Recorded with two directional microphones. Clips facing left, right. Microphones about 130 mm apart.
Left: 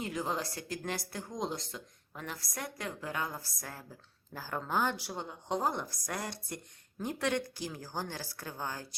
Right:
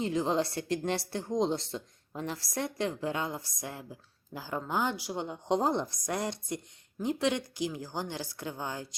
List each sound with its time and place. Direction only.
0.0 s a woman's voice: 25° right (ahead or behind)